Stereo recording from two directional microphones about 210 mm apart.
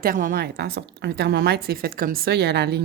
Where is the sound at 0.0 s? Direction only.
40° right (ahead or behind).